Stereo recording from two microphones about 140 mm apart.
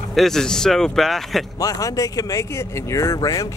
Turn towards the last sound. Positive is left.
turn(degrees=25)  # may be behind; listen again after turning